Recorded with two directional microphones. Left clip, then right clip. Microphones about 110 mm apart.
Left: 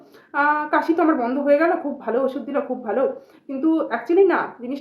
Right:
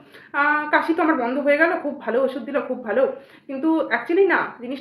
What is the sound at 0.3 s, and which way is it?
A woman's voice, 35° left (ahead or behind).